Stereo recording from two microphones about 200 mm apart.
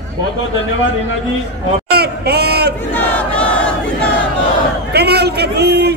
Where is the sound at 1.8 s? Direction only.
55° right (ahead or behind).